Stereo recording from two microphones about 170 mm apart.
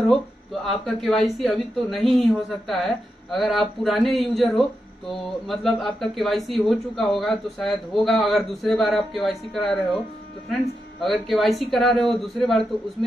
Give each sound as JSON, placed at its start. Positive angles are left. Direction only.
{"t": 0.8, "sound": "speech", "side_deg": 5}